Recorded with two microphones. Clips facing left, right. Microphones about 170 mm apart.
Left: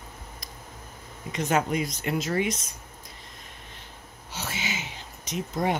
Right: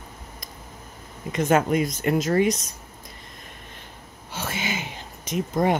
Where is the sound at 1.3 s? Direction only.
50° right (ahead or behind).